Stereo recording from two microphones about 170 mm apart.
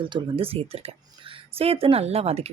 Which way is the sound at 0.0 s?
30° right (ahead or behind).